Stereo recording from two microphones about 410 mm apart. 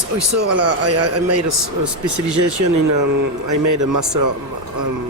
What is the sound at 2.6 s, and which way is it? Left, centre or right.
A man's voice, right.